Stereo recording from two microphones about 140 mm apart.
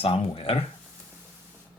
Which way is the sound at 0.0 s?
45° left (ahead or behind).